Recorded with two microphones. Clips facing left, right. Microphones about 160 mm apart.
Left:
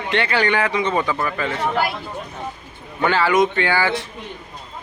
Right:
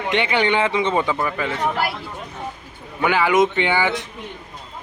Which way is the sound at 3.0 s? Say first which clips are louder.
Even; 15° right (ahead or behind).